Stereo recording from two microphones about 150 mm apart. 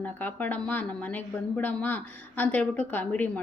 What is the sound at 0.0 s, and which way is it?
Speech, 10° left (ahead or behind).